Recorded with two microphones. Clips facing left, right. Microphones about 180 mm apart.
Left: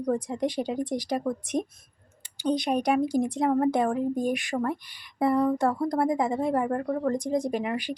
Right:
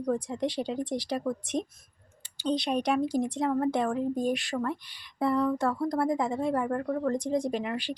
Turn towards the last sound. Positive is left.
turn(degrees=10)  # may be behind; listen again after turning